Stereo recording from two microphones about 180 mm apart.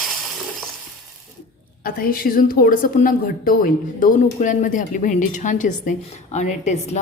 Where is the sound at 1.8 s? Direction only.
55° left (ahead or behind).